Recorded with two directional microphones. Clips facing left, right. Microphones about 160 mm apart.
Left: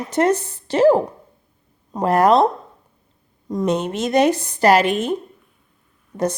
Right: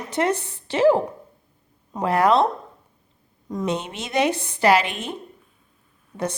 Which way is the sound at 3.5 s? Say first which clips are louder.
Left 5 dB; 40° left (ahead or behind).